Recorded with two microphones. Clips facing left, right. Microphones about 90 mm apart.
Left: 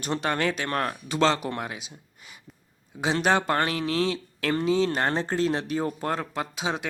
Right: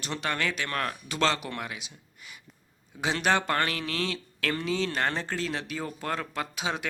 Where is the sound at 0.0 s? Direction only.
35° left (ahead or behind).